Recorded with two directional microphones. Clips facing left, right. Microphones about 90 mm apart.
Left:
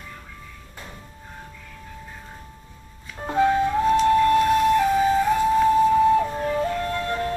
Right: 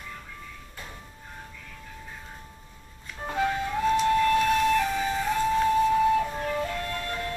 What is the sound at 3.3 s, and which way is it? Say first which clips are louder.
Music: left 8 dB; 30° left (ahead or behind).